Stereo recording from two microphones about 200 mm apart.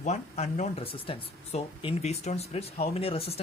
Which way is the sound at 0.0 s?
35° left (ahead or behind).